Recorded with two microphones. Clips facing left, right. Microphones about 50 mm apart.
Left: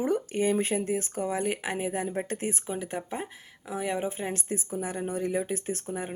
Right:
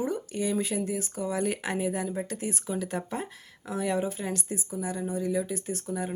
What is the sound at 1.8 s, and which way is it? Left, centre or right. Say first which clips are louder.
Speech: right 1 dB; left.